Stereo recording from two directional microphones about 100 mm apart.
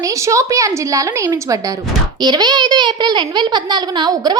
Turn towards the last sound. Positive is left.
turn(degrees=-45)  # may be behind; listen again after turning